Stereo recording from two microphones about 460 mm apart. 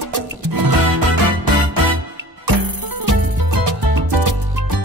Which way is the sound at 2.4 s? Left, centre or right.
Right.